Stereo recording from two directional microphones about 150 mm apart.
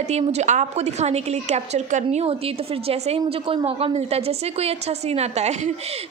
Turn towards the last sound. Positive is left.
turn(degrees=-50)  # may be behind; listen again after turning